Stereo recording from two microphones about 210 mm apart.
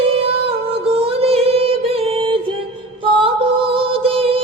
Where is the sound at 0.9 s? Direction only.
30° right (ahead or behind).